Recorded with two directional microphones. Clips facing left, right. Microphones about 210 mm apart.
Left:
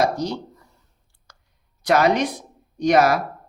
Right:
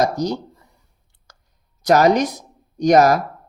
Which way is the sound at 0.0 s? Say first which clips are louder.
Right 2 dB; 40° right (ahead or behind).